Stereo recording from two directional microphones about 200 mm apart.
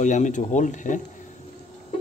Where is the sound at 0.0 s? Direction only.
40° left (ahead or behind).